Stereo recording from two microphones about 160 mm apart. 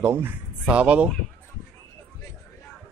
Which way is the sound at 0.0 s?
15° right (ahead or behind).